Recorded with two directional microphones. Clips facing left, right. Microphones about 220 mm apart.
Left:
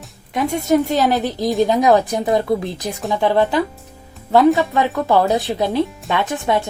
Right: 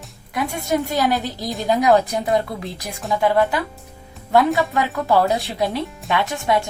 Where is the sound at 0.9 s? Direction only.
20° left (ahead or behind).